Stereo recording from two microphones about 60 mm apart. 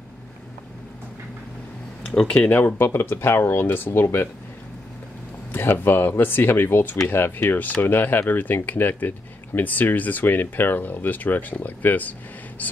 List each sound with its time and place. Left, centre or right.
2.0 s speech: centre
2.5 s speech: left
5.5 s speech: left